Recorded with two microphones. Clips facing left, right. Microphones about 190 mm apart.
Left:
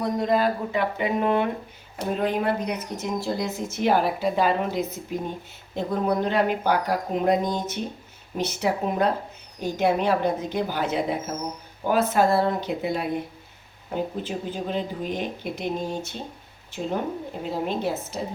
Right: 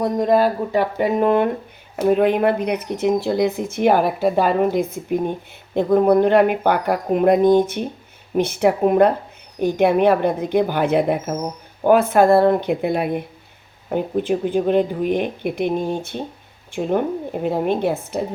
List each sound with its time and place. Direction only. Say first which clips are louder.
0.0 s speech: right 6 dB; 50° right (ahead or behind)
2.0 s speech: right 8 dB; 60° right (ahead or behind)
17.4 s speech: right 7 dB; 60° right (ahead or behind)